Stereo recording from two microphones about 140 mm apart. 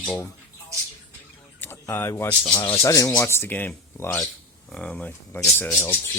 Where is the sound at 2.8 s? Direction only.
20° left (ahead or behind).